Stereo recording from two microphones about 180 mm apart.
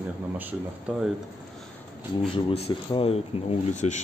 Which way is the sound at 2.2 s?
35° left (ahead or behind).